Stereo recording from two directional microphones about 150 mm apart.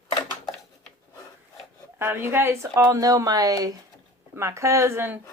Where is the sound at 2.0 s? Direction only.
15° right (ahead or behind).